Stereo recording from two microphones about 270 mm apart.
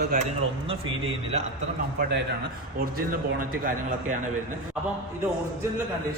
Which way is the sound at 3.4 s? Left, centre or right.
Right.